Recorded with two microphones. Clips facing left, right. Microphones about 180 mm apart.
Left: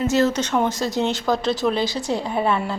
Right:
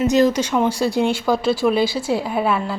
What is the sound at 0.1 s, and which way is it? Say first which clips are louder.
Speech: right 3 dB; 15° right (ahead or behind).